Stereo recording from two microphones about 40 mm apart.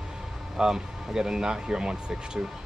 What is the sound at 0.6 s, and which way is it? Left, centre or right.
Speech, centre.